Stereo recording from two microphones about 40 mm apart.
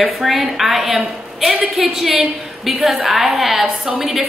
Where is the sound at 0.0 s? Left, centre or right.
Centre.